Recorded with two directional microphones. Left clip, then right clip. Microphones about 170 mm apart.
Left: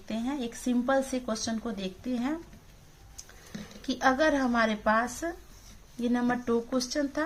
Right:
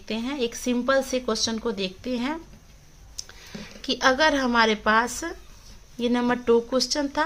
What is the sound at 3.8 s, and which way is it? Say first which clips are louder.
A woman's voice: right 5 dB; 35° right (ahead or behind).